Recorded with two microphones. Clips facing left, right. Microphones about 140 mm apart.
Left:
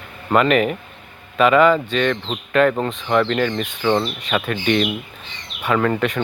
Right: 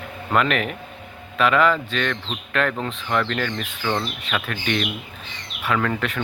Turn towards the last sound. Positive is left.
turn(degrees=0)  # may be behind; listen again after turning